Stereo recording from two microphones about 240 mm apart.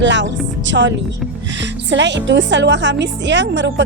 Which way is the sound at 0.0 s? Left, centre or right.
Right.